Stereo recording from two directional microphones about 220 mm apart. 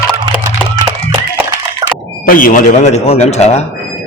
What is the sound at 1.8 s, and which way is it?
Squawk, 15° right (ahead or behind).